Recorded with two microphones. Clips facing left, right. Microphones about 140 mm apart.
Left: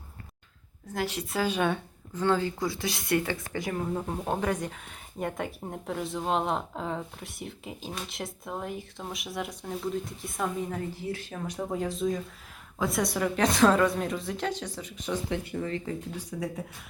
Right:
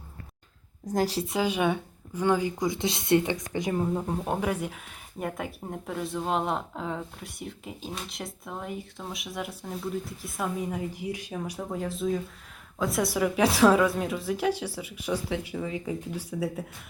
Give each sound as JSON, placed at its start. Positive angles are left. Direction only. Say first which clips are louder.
{"t": 0.9, "sound": "a woman's voice", "louder": "right 5 dB", "side_deg": -35}
{"t": 1.3, "sound": "a woman's voice", "louder": "right 1 dB", "side_deg": -15}
{"t": 3.8, "sound": "a woman's voice", "louder": "right 2 dB", "side_deg": -5}